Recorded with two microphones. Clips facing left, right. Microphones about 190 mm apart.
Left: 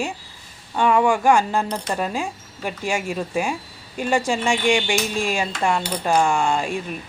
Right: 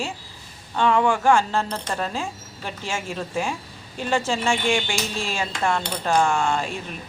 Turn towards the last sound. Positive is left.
turn(degrees=15)  # may be behind; listen again after turning